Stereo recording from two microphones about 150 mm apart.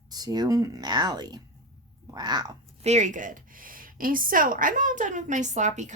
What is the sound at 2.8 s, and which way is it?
A woman's voice, 50° right (ahead or behind).